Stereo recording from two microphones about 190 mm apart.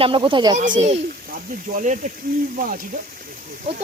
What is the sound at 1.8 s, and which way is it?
Speech, 45° right (ahead or behind).